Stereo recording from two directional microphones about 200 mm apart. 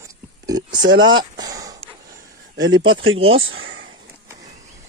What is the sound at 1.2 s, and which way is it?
Speech, 20° right (ahead or behind).